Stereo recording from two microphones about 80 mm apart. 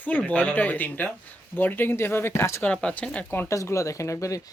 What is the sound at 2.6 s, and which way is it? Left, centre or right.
Speech, centre.